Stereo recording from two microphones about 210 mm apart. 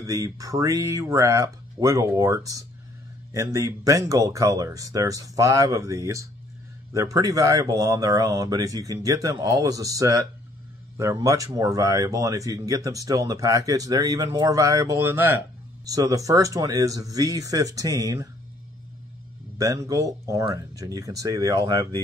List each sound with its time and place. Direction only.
0.0 s speech: 15° right (ahead or behind)
19.6 s speech: 15° right (ahead or behind)